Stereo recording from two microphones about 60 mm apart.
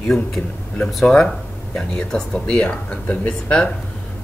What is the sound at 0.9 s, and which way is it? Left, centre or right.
A man's voice, centre.